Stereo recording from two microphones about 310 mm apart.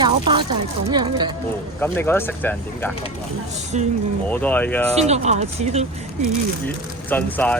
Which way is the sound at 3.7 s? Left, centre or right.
Right.